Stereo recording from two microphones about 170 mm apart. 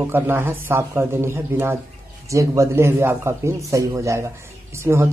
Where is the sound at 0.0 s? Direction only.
10° right (ahead or behind).